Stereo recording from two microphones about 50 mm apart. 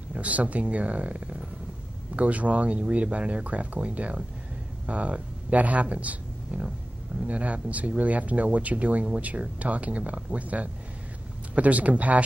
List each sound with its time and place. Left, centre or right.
0.1 s speech: right